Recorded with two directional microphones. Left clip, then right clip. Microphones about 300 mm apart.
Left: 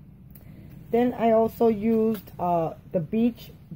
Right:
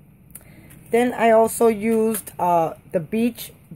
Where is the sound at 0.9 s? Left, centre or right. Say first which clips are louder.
Right 5 dB; centre.